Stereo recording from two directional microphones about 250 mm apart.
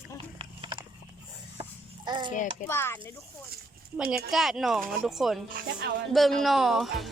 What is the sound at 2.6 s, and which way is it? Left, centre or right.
Speech, centre.